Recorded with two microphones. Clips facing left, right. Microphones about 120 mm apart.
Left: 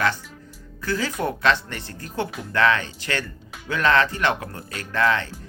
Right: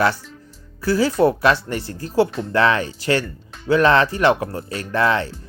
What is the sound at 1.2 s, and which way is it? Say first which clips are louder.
Speech: right 4 dB; 30° right (ahead or behind).